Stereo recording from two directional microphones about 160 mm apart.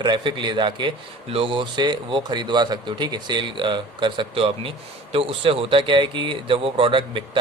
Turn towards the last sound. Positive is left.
turn(degrees=-30)  # may be behind; listen again after turning